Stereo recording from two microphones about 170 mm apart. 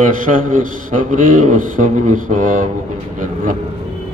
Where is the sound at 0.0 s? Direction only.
50° right (ahead or behind).